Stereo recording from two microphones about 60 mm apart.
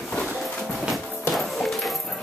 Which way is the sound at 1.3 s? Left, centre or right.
Centre.